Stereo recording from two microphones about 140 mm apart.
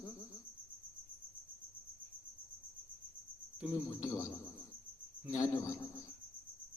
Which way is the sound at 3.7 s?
20° left (ahead or behind).